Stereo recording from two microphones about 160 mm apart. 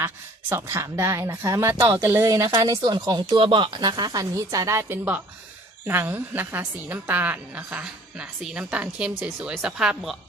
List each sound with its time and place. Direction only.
0.5 s a woman's voice: 15° right (ahead or behind)